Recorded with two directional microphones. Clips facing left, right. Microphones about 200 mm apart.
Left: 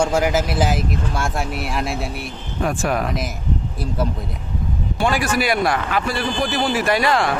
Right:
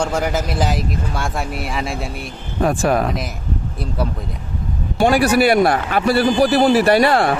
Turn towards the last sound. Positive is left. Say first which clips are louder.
# right 6 dB
turn(degrees=-35)  # may be behind; listen again after turning